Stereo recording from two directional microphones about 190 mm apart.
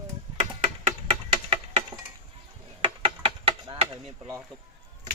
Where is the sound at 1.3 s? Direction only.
25° right (ahead or behind).